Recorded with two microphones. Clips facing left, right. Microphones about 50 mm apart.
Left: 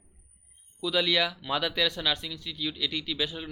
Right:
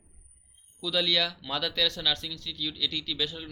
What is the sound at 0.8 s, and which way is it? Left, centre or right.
Speech, centre.